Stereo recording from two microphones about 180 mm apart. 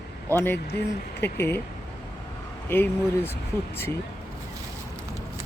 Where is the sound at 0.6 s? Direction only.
65° left (ahead or behind).